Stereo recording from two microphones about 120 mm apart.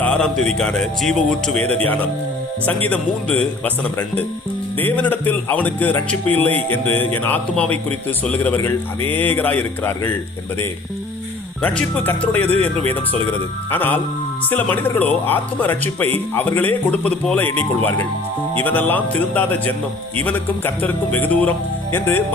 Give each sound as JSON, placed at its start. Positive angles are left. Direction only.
{"t": 0.0, "sound": "a man's voice", "side_deg": 5}
{"t": 11.6, "sound": "speech", "side_deg": 10}
{"t": 18.6, "sound": "speech", "side_deg": 15}